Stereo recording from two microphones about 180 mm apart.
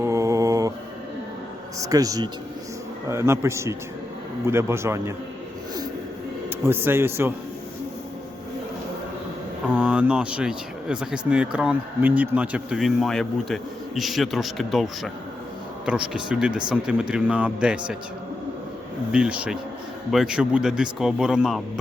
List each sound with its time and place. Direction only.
0.0 s mantra: 15° right (ahead or behind)
1.8 s speech: 20° right (ahead or behind)
6.6 s speech: 15° right (ahead or behind)
9.7 s speech: 5° right (ahead or behind)
19.1 s speech: 5° right (ahead or behind)